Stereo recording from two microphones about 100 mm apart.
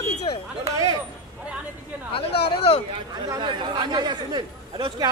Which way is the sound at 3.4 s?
50° right (ahead or behind).